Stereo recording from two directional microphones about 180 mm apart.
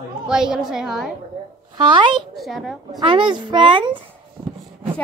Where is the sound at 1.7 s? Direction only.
25° right (ahead or behind).